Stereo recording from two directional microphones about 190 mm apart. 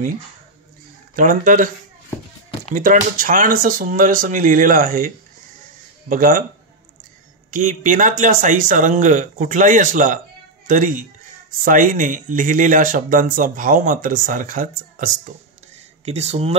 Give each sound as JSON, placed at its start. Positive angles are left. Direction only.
{"t": 1.1, "sound": "speech", "side_deg": -45}
{"t": 2.7, "sound": "speech", "side_deg": -45}
{"t": 7.5, "sound": "speech", "side_deg": -45}
{"t": 16.1, "sound": "speech", "side_deg": -35}